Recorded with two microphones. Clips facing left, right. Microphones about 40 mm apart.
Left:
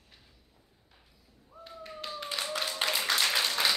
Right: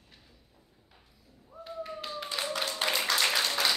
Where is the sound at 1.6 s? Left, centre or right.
Centre.